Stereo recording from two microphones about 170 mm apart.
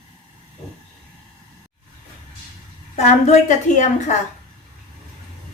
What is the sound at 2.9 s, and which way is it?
Speech, 40° left (ahead or behind).